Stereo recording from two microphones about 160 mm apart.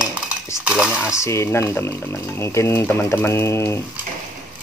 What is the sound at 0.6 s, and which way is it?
Speech, 5° right (ahead or behind).